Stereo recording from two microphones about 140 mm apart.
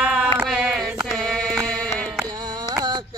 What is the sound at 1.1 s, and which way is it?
Sheep, 5° left (ahead or behind).